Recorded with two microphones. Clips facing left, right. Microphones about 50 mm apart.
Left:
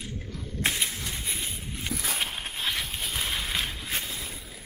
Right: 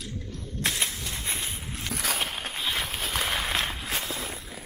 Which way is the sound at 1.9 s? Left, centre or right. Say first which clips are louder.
Right 3 dB; right.